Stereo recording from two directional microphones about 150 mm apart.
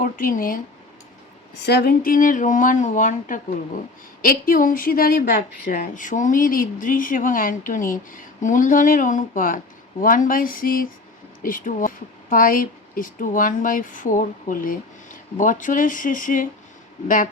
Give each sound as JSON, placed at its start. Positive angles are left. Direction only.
{"t": 0.0, "sound": "speech", "side_deg": 65}
{"t": 1.6, "sound": "a woman's voice", "side_deg": 90}
{"t": 5.6, "sound": "a woman's voice", "side_deg": 60}